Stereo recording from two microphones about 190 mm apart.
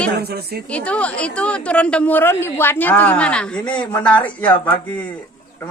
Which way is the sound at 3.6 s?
25° left (ahead or behind).